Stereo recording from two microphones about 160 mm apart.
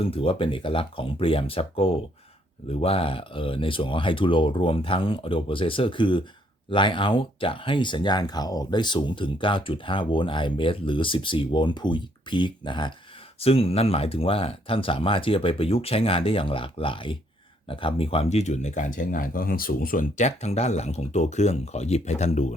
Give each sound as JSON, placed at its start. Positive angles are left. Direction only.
{"t": 0.0, "sound": "speech", "side_deg": 35}